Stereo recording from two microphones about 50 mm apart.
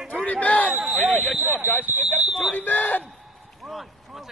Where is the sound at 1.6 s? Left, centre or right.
Right.